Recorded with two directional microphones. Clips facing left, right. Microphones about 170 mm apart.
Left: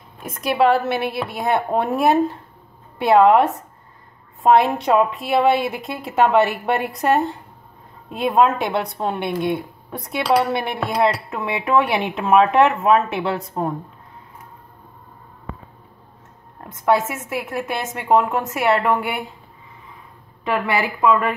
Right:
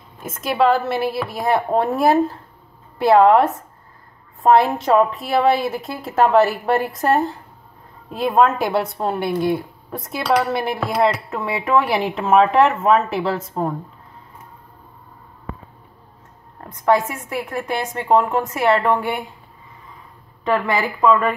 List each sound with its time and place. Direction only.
0.2 s a woman's voice: centre (ahead or behind)
17.3 s a woman's voice: 5° left (ahead or behind)
21.0 s speech: 15° left (ahead or behind)